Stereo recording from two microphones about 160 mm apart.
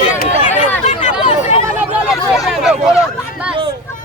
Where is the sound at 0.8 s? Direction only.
50° left (ahead or behind).